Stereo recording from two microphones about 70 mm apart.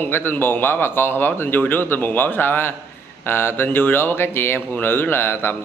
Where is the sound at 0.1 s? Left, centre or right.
Left.